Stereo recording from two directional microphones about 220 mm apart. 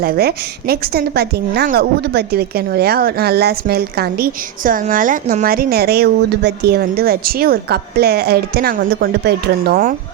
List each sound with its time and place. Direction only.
0.0 s a woman's voice: 45° right (ahead or behind)